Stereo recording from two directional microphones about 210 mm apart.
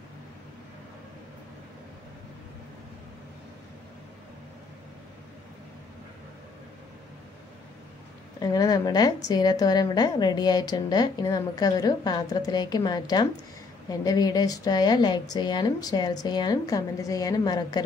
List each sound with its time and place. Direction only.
8.4 s a woman's voice: 20° left (ahead or behind)